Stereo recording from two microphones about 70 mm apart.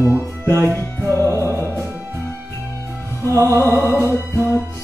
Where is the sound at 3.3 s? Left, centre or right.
Right.